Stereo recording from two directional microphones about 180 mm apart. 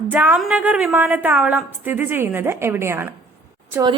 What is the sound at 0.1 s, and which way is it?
A woman's voice, 10° right (ahead or behind).